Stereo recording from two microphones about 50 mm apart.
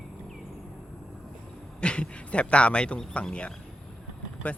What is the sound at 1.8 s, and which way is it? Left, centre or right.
Speech, left.